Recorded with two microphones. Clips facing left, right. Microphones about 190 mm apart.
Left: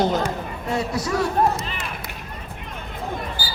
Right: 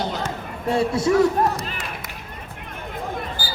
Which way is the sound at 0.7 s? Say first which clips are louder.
Right 5 dB; 30° right (ahead or behind).